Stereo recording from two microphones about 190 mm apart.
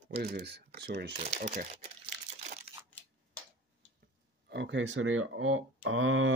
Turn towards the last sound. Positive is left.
turn(degrees=-90)